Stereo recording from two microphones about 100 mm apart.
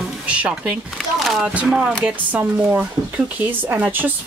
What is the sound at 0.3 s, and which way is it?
Speech, 10° right (ahead or behind).